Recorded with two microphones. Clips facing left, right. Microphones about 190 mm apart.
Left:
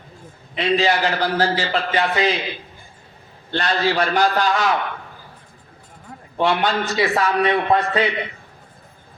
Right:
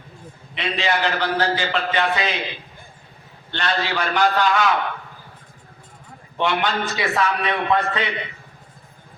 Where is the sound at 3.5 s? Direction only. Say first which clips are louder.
Left 4 dB; 35° left (ahead or behind).